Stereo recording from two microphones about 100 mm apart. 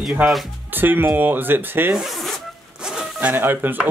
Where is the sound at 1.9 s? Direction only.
Centre (ahead or behind).